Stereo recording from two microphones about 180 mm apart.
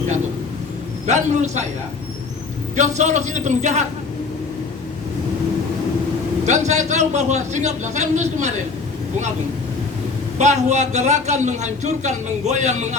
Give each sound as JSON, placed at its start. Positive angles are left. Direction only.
{"t": 1.0, "sound": "a man's voice", "side_deg": -40}
{"t": 2.7, "sound": "a man's voice", "side_deg": -40}
{"t": 6.4, "sound": "a man's voice", "side_deg": -40}
{"t": 10.3, "sound": "a man's voice", "side_deg": -40}